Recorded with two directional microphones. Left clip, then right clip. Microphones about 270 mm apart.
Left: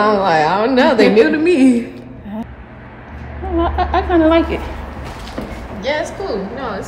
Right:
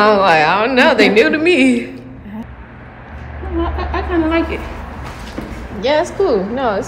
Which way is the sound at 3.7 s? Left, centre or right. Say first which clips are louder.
Left 6 dB; left.